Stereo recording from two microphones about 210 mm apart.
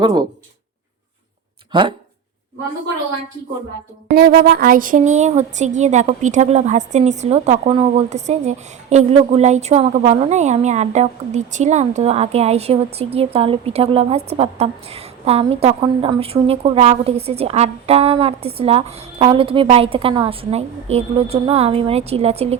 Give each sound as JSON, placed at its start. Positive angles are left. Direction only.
{"t": 0.0, "sound": "a woman's voice", "side_deg": -20}
{"t": 4.1, "sound": "a woman's voice", "side_deg": -45}